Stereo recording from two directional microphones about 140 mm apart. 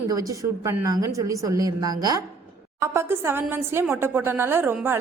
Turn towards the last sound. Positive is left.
turn(degrees=-15)  # may be behind; listen again after turning